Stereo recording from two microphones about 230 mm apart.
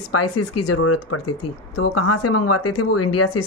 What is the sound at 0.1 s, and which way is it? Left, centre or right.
Speech, left.